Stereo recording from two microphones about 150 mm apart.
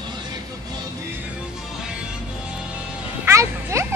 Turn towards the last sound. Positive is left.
turn(degrees=-20)  # may be behind; listen again after turning